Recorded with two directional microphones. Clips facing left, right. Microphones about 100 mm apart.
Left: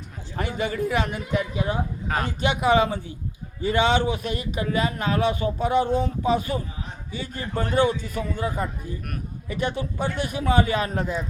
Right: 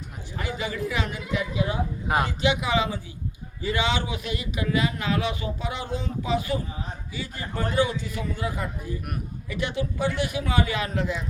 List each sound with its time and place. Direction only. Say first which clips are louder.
0.3 s a man's voice: left 4 dB; 45° left (ahead or behind)
2.0 s speech: right 3 dB; 15° right (ahead or behind)
2.4 s a man's voice: left 4 dB; 45° left (ahead or behind)